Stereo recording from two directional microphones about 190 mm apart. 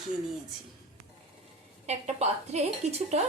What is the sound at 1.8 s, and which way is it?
A woman's voice, 35° right (ahead or behind).